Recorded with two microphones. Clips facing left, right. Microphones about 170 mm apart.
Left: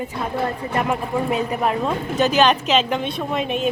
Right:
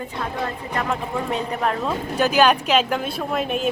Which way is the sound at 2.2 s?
10° right (ahead or behind).